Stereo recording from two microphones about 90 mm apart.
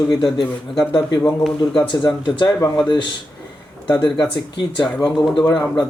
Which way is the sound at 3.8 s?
60° left (ahead or behind).